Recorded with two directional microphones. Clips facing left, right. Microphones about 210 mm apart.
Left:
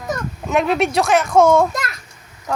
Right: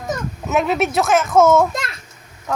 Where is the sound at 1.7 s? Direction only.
25° right (ahead or behind).